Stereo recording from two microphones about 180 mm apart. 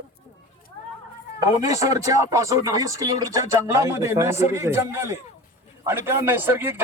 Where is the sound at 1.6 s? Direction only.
20° right (ahead or behind).